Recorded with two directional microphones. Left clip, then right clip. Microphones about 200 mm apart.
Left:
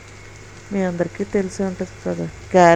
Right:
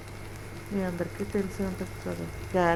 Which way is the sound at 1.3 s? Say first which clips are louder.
Left 10 dB; 40° left (ahead or behind).